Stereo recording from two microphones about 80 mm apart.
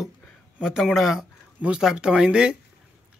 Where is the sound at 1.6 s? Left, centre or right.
Centre.